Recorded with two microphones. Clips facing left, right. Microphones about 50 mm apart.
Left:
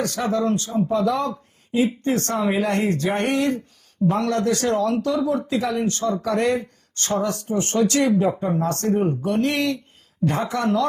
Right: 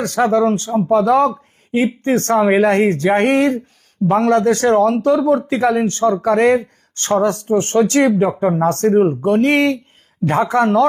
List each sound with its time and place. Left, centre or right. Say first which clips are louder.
0.3 s speech: right 5 dB; right